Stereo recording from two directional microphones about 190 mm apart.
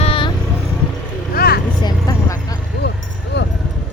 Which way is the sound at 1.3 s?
55° left (ahead or behind).